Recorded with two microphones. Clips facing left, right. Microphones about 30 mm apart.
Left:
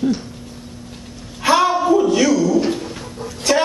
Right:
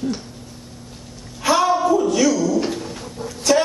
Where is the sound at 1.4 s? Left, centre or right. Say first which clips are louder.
Left 2 dB; left.